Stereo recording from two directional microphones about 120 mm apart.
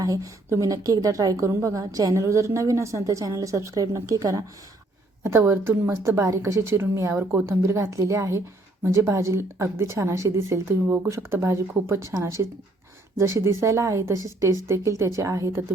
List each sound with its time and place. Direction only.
0.0 s a woman's voice: 30° right (ahead or behind)